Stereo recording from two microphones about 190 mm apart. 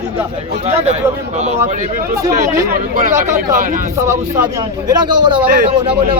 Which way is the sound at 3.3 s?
45° right (ahead or behind).